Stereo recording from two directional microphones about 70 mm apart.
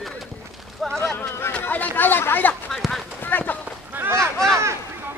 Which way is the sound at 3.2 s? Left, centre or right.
Left.